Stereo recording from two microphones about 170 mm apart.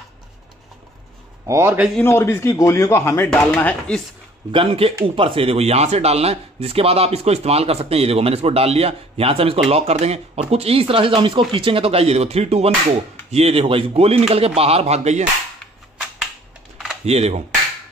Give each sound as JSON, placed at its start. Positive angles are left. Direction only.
{"t": 1.5, "sound": "speech", "side_deg": -15}
{"t": 2.0, "sound": "a man's voice", "side_deg": 15}
{"t": 4.5, "sound": "speech", "side_deg": -30}
{"t": 17.0, "sound": "speech", "side_deg": -40}